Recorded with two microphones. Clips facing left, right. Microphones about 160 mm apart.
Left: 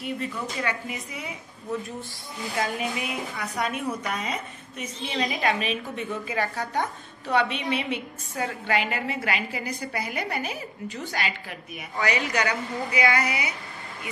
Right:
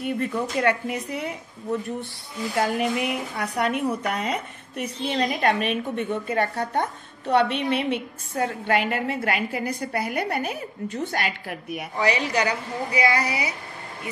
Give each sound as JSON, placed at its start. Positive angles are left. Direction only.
{"t": 0.0, "sound": "a woman's voice", "side_deg": -55}
{"t": 2.5, "sound": "a woman's voice", "side_deg": -70}
{"t": 12.0, "sound": "a woman's voice", "side_deg": -30}